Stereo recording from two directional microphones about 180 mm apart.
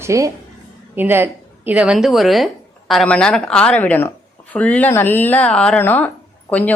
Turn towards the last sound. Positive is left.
turn(degrees=10)  # may be behind; listen again after turning